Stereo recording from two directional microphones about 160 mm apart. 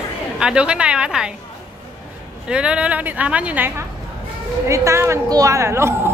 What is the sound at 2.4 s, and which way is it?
A woman's voice, 5° right (ahead or behind).